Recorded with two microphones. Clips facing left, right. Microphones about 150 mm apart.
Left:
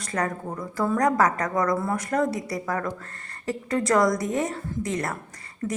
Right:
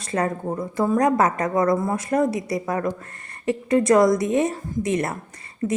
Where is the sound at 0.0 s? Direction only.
25° right (ahead or behind).